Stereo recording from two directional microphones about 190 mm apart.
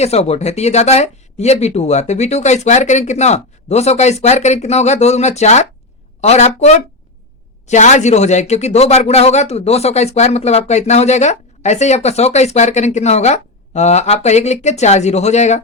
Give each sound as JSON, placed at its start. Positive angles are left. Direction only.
{"t": 0.0, "sound": "speech", "side_deg": 35}